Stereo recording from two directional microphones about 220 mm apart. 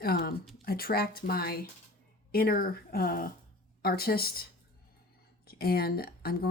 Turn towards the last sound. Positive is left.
turn(degrees=45)  # may be behind; listen again after turning